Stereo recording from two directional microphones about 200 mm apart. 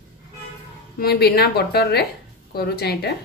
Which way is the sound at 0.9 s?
50° left (ahead or behind).